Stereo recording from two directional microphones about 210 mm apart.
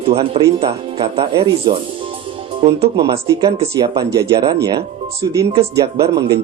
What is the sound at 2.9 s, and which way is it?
Speech, 15° right (ahead or behind).